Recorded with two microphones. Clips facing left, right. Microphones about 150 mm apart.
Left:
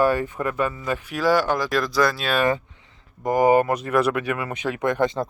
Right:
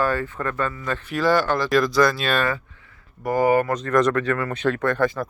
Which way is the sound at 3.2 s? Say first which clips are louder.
Left 2 dB; 15° left (ahead or behind).